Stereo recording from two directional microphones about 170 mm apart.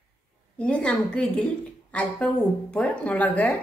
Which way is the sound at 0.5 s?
5° left (ahead or behind).